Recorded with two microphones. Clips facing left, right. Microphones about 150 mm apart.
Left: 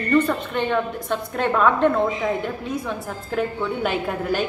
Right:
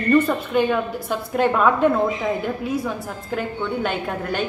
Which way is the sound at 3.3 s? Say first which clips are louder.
Left 1 dB; centre (ahead or behind).